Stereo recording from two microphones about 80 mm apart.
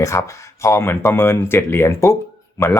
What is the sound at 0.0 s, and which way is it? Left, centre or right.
Speech, left.